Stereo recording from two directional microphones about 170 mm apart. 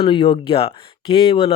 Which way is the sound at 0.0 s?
30° left (ahead or behind).